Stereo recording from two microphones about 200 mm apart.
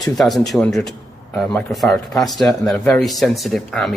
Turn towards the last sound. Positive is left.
turn(degrees=0)  # may be behind; listen again after turning